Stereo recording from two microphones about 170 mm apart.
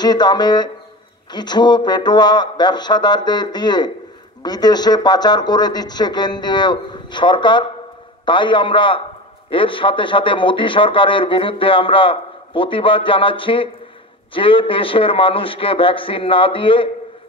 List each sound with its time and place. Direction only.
0.0 s a man's voice: 25° left (ahead or behind)